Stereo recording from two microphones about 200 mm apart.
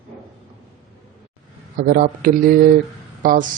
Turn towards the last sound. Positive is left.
turn(degrees=-40)  # may be behind; listen again after turning